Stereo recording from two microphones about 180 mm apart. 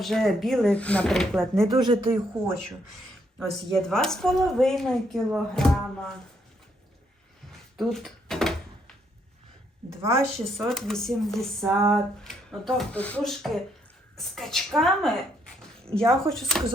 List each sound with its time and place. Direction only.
0.0 s speech: centre (ahead or behind)
1.7 s speech: 25° right (ahead or behind)
3.3 s speech: centre (ahead or behind)
7.8 s a sound: centre (ahead or behind)
10.0 s a woman's voice: 15° right (ahead or behind)
10.3 s speech: centre (ahead or behind)